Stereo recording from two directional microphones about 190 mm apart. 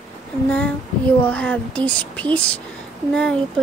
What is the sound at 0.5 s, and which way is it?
Child singing, 10° left (ahead or behind).